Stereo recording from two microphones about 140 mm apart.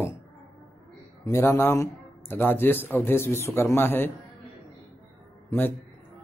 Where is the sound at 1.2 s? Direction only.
20° left (ahead or behind).